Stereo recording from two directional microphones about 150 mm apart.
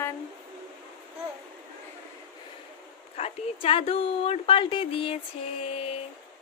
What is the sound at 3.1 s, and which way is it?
A woman's voice, 40° left (ahead or behind).